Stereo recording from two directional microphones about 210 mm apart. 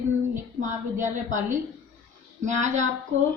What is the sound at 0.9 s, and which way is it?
Speech, 35° right (ahead or behind).